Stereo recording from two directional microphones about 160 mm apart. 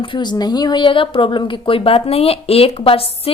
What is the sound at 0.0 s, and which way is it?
A woman's voice, 30° left (ahead or behind).